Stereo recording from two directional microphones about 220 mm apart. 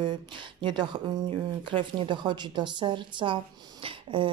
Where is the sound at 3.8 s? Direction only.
25° right (ahead or behind).